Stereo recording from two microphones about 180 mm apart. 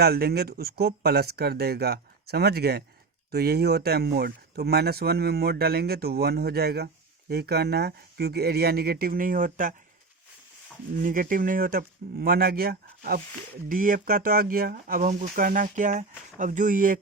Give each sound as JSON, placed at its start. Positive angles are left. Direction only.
{"t": 0.0, "sound": "speech", "side_deg": -60}
{"t": 11.0, "sound": "speech", "side_deg": -50}